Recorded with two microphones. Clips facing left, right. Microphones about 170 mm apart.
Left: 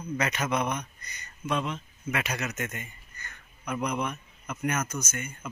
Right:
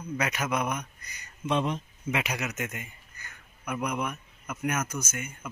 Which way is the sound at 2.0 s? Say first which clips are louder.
Right 1 dB; 15° right (ahead or behind).